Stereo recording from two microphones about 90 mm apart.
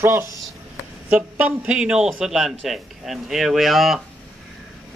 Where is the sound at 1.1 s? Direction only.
15° right (ahead or behind).